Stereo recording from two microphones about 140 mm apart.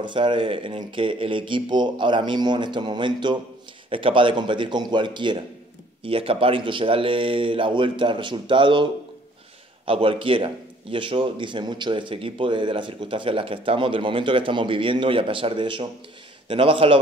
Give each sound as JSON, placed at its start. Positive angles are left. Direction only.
{"t": 0.0, "sound": "a man's voice", "side_deg": -35}
{"t": 9.8, "sound": "a man's voice", "side_deg": -40}